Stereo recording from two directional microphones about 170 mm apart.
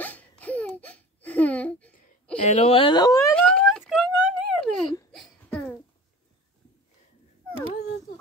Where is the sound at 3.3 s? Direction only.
5° left (ahead or behind).